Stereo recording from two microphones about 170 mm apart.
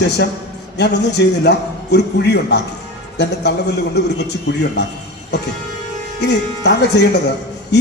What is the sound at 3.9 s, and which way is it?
Speech, 85° left.